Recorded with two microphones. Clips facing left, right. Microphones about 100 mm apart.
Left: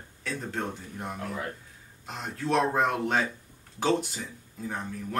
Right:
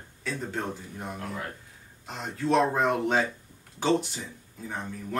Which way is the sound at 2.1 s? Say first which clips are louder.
Right 2 dB; centre (ahead or behind).